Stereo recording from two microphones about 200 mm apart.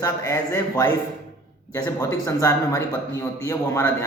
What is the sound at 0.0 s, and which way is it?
A man's voice, 15° left (ahead or behind).